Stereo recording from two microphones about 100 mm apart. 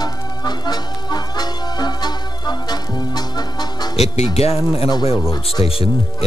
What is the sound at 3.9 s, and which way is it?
Speech, 90° left.